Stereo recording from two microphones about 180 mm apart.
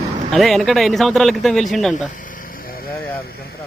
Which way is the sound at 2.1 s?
45° left (ahead or behind).